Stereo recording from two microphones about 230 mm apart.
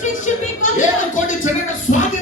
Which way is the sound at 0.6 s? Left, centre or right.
Left.